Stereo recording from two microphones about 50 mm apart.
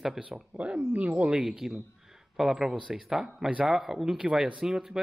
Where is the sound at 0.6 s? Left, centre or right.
Right.